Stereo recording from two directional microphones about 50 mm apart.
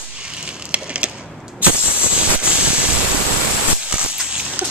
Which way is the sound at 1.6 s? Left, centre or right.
Right.